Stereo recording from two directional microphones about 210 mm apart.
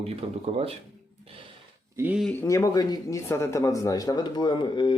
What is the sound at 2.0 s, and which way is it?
Speech, 5° right (ahead or behind).